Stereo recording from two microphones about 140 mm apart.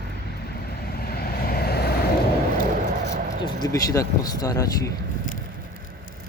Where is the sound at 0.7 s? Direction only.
90° left.